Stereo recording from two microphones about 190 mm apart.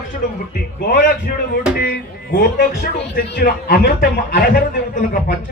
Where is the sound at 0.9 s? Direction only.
50° left (ahead or behind).